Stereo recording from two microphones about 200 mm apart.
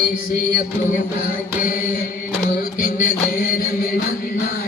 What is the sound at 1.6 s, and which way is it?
Mantra, 45° left (ahead or behind).